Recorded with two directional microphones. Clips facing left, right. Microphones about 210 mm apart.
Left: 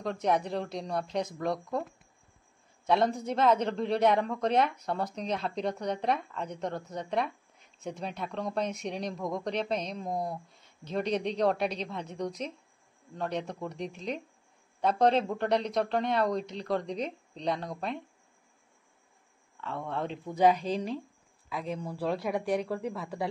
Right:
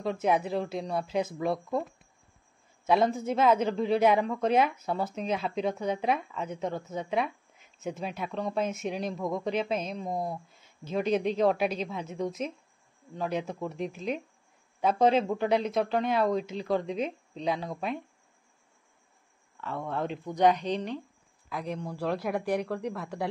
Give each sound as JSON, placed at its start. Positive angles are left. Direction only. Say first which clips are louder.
{"t": 0.0, "sound": "speech", "louder": "right 2 dB", "side_deg": -5}
{"t": 2.9, "sound": "speech", "louder": "right 2 dB", "side_deg": 0}
{"t": 19.5, "sound": "speech", "louder": "right 2 dB", "side_deg": 0}